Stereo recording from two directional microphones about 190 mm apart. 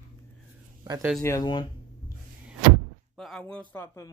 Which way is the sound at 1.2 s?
20° left (ahead or behind).